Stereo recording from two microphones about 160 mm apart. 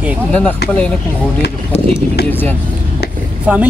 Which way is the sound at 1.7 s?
40° left (ahead or behind).